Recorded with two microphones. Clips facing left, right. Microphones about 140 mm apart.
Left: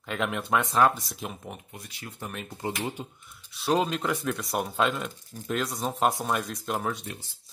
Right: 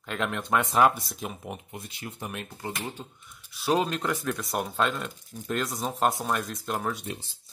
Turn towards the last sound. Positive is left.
turn(degrees=0)  # may be behind; listen again after turning